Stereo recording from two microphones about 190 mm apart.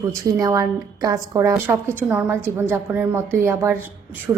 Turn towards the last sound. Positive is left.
turn(degrees=-5)  # may be behind; listen again after turning